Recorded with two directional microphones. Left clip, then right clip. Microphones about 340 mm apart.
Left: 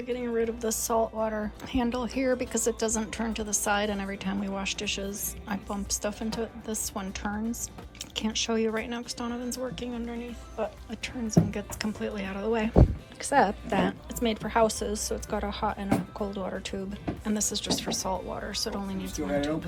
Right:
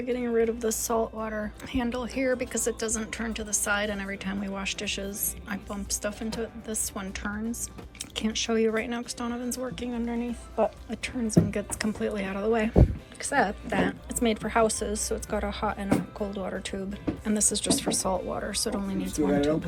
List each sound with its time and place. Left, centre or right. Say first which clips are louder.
0.0 s a woman's voice: right 3 dB; centre